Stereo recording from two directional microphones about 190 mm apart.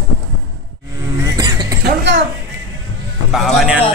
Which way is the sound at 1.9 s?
65° right (ahead or behind).